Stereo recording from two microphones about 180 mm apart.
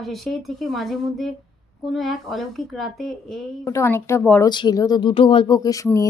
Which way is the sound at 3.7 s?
15° left (ahead or behind).